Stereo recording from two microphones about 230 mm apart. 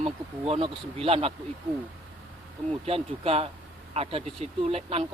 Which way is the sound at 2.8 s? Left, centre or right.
Right.